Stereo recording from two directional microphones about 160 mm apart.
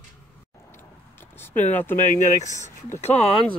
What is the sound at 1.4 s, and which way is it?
Speech, 10° left (ahead or behind).